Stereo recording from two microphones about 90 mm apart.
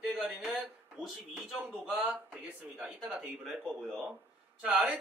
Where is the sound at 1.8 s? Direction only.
15° right (ahead or behind).